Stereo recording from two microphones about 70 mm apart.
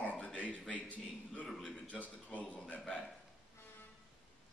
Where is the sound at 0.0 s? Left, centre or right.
Centre.